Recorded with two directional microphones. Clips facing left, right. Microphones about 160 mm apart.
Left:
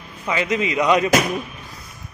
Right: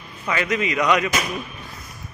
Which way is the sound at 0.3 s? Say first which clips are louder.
Left 1 dB; 25° left (ahead or behind).